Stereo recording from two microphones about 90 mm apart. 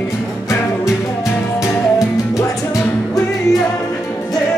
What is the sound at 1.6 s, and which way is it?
Music, 35° left (ahead or behind).